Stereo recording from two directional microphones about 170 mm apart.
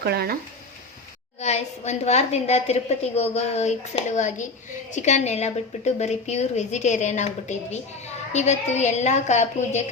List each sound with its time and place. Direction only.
0.0 s speech: 65° right (ahead or behind)
1.4 s a woman's voice: 40° left (ahead or behind)